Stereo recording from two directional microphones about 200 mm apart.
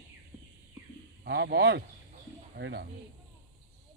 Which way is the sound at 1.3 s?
60° right (ahead or behind).